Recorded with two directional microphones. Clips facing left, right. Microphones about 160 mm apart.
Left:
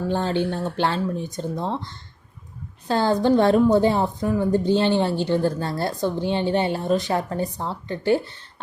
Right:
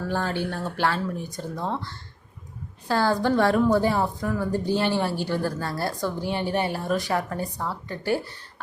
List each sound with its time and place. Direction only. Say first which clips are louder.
0.0 s a woman's voice: left 4 dB; 20° left (ahead or behind)